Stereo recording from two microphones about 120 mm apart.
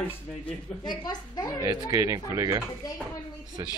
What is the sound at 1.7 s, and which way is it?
Speech, 25° right (ahead or behind).